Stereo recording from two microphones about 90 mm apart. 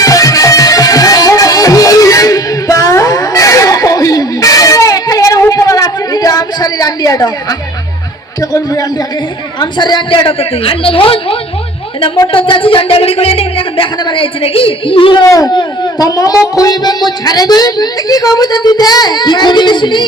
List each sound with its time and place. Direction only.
0.0 s music: 40° left (ahead or behind)
8.4 s a man's voice: 40° left (ahead or behind)
9.6 s a woman's voice: 55° left (ahead or behind); by 11.3 s 90° left
12.3 s speech: 75° left (ahead or behind); by 13.8 s 90° left
14.0 s a woman's voice: 75° left (ahead or behind)
15.2 s a man's voice: 40° left (ahead or behind); by 20.1 s 55° left (ahead or behind)